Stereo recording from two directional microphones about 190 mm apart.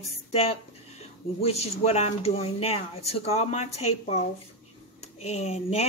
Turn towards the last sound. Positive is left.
turn(degrees=35)  # may be behind; listen again after turning